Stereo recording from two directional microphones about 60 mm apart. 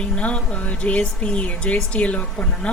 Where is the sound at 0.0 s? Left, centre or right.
Centre.